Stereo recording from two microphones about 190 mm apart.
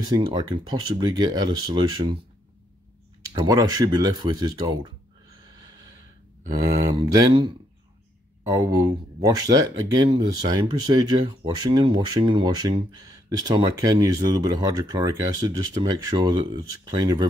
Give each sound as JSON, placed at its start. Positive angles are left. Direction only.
{"t": 0.0, "sound": "speech", "side_deg": -20}
{"t": 3.4, "sound": "speech", "side_deg": -20}
{"t": 5.5, "sound": "snort", "side_deg": -20}
{"t": 6.5, "sound": "speech", "side_deg": -15}
{"t": 8.5, "sound": "speech", "side_deg": -15}